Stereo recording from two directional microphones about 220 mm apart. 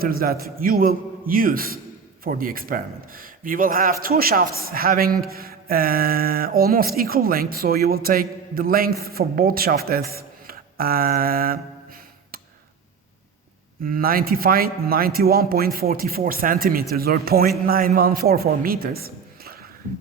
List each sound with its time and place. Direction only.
0.0 s a man's voice: 40° right (ahead or behind)
13.8 s a man's voice: 40° right (ahead or behind)